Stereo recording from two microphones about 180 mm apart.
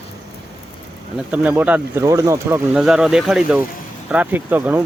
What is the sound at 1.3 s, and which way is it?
Speech, 5° right (ahead or behind).